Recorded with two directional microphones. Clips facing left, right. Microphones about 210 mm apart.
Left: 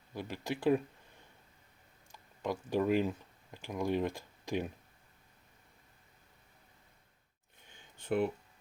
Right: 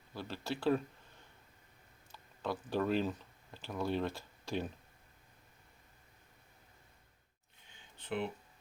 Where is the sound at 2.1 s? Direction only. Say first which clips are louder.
Left 2 dB; 15° left (ahead or behind).